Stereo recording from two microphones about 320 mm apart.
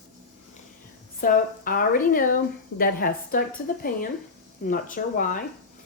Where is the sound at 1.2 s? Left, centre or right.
Left.